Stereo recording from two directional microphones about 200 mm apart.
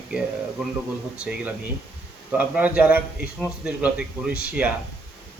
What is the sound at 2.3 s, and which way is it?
A man's voice, 5° right (ahead or behind).